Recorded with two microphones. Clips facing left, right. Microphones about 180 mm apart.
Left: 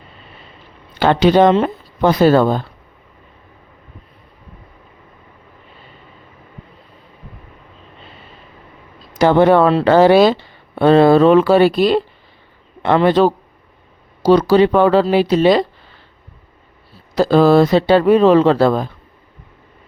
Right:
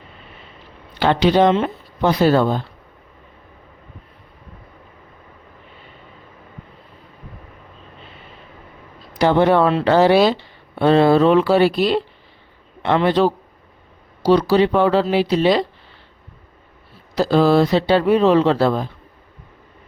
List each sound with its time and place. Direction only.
0.9 s speech: 45° left (ahead or behind)
9.1 s speech: 50° left (ahead or behind)
17.2 s speech: 50° left (ahead or behind)